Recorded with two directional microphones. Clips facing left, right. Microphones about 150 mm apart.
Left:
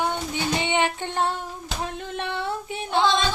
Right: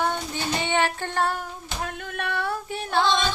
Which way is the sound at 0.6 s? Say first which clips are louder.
Even; 20° left (ahead or behind).